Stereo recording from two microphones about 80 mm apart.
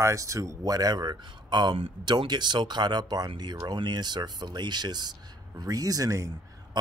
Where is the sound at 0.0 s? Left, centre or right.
Right.